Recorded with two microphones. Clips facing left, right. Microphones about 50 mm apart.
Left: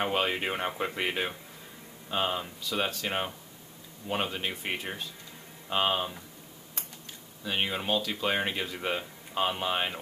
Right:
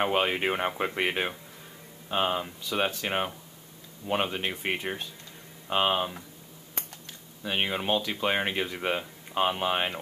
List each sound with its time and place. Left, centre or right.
0.0 s speech: centre
7.4 s speech: centre